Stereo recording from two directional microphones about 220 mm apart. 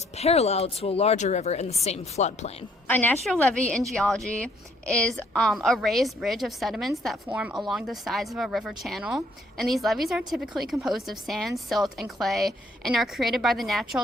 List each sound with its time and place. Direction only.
0.2 s speech: 30° left (ahead or behind)
2.8 s a woman's voice: 10° left (ahead or behind)